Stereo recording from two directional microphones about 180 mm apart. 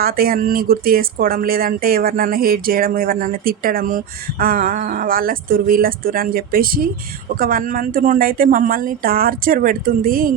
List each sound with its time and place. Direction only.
0.0 s speech: 55° right (ahead or behind)